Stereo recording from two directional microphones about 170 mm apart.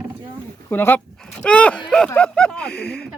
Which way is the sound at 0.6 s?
10° left (ahead or behind).